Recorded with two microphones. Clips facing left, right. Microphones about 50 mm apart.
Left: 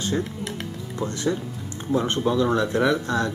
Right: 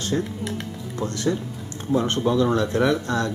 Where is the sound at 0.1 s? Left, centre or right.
Centre.